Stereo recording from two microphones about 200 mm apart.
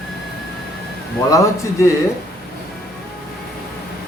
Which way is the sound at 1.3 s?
15° left (ahead or behind).